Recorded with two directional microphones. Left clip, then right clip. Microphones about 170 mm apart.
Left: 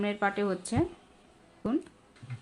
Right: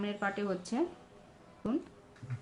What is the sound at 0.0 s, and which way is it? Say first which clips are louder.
Speech: left 6 dB; 50° left (ahead or behind).